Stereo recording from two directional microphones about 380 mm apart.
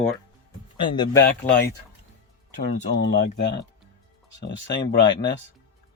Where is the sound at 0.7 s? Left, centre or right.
Centre.